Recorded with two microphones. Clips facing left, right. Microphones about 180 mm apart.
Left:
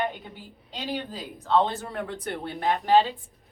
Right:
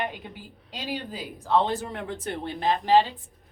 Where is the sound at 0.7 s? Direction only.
10° right (ahead or behind).